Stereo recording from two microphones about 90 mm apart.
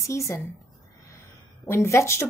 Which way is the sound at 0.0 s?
35° left (ahead or behind).